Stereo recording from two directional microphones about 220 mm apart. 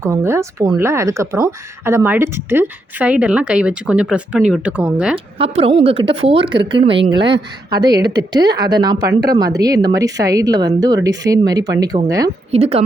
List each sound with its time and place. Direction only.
0.0 s speech: 10° right (ahead or behind)
5.1 s speech: 25° right (ahead or behind)
12.5 s speech: 25° right (ahead or behind)